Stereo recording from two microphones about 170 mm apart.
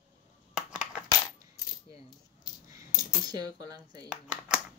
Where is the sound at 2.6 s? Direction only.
20° right (ahead or behind).